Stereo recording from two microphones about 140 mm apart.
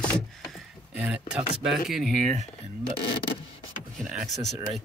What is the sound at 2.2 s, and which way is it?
Speech, 65° right (ahead or behind).